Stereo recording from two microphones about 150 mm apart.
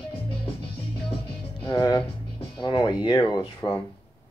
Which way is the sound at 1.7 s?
30° left (ahead or behind).